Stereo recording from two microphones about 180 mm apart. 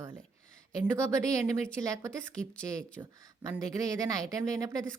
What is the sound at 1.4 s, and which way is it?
Speech, 20° right (ahead or behind).